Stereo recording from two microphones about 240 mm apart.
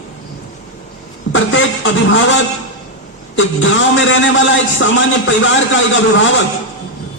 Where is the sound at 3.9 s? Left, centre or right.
Left.